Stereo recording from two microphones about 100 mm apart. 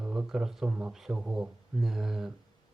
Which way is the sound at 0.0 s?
10° right (ahead or behind).